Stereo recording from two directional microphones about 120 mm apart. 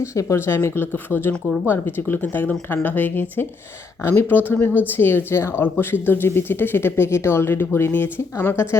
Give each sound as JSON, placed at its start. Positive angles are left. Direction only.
{"t": 0.0, "sound": "speech", "side_deg": 25}